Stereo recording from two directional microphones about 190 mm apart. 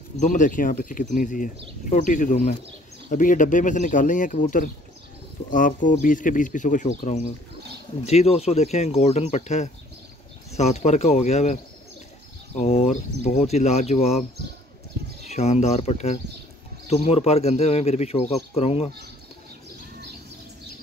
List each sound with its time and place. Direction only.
0.2 s speech: 40° left (ahead or behind)
15.2 s speech: 35° left (ahead or behind)